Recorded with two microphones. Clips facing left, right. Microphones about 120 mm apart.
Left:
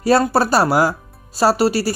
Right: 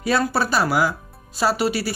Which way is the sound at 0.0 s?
40° left (ahead or behind).